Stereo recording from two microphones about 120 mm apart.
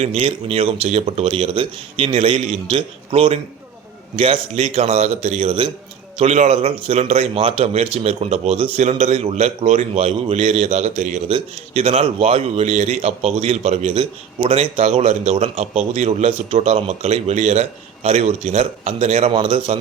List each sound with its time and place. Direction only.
0.0 s a man's voice: 60° right (ahead or behind)
6.1 s a man's voice: 65° right (ahead or behind)
8.8 s a man's voice: 70° right (ahead or behind)
11.3 s a man's voice: 50° right (ahead or behind)
19.3 s speech: 45° right (ahead or behind)